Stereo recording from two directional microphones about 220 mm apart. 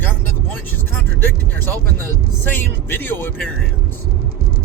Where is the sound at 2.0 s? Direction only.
10° left (ahead or behind).